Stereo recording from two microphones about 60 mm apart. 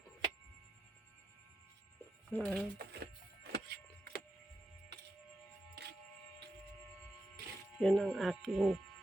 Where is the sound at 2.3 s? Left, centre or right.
Left.